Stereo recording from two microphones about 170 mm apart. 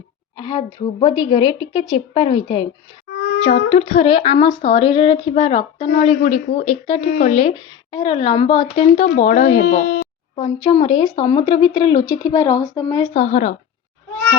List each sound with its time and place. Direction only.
0.3 s speech: 25° left (ahead or behind)
3.1 s a sound: 90° left
3.7 s a woman's voice: 40° left (ahead or behind)
6.2 s a woman's voice: 45° left (ahead or behind)
9.1 s speech: 45° left (ahead or behind); by 10.0 s 60° left (ahead or behind)
10.3 s speech: 30° left (ahead or behind)
13.1 s speech: 45° left (ahead or behind)